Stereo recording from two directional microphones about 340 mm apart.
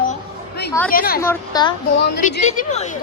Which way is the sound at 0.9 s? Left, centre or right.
Left.